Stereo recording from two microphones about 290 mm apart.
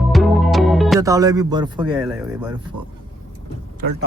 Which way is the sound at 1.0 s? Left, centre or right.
Centre.